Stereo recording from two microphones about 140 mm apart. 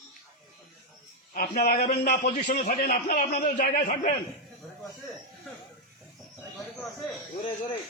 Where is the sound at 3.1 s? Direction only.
90° left.